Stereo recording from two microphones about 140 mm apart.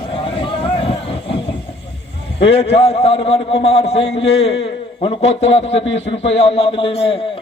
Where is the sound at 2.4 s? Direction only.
45° left (ahead or behind).